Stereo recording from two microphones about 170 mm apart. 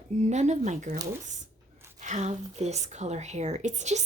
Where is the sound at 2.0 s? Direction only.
45° right (ahead or behind).